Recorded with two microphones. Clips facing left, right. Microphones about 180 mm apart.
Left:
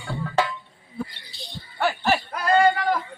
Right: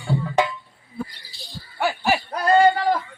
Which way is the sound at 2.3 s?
30° right (ahead or behind).